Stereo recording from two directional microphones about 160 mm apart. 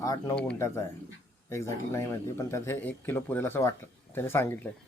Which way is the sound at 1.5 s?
15° left (ahead or behind).